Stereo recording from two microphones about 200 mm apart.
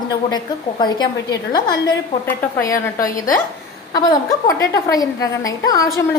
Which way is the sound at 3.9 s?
20° left (ahead or behind).